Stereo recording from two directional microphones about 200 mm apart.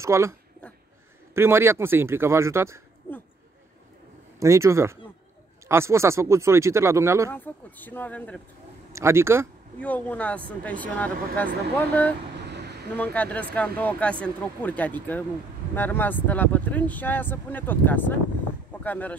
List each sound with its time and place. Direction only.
0.0 s speech: 15° right (ahead or behind)
1.3 s speech: 10° right (ahead or behind)
4.4 s speech: 15° right (ahead or behind)
7.2 s speech: 10° left (ahead or behind)
8.9 s speech: 15° right (ahead or behind)
9.8 s speech: 10° left (ahead or behind)
12.4 s vehicle: 55° right (ahead or behind)
12.9 s speech: 10° left (ahead or behind)
18.7 s a sound: 10° left (ahead or behind)